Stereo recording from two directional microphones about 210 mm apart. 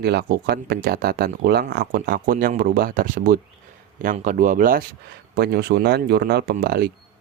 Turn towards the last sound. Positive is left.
turn(degrees=-50)  # may be behind; listen again after turning